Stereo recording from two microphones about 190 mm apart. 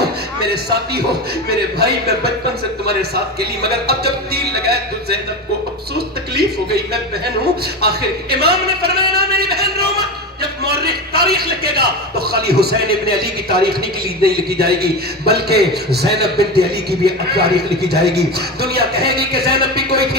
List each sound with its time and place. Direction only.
0.4 s a man's voice: 55° right (ahead or behind)
3.6 s a man's voice: 55° right (ahead or behind)
6.3 s a man's voice: 55° right (ahead or behind)